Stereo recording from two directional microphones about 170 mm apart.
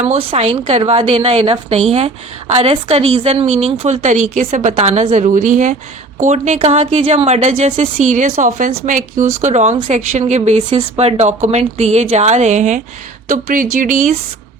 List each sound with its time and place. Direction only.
0.1 s a woman's voice: 35° right (ahead or behind)